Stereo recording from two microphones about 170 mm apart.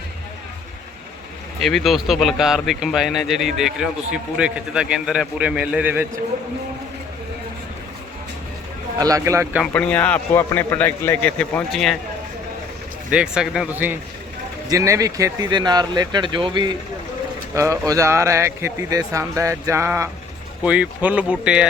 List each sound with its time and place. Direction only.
1.6 s a man's voice: centre (ahead or behind)
9.0 s speech: 20° right (ahead or behind)
9.7 s a man's voice: 10° left (ahead or behind)
13.1 s speech: 5° right (ahead or behind)